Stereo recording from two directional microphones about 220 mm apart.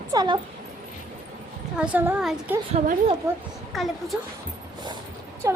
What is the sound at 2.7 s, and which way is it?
Speech, 30° right (ahead or behind).